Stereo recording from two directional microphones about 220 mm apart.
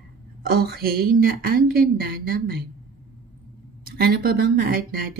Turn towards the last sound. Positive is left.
turn(degrees=-45)  # may be behind; listen again after turning